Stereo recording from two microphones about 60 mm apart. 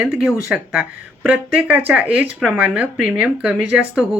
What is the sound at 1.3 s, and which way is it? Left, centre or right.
Speech, right.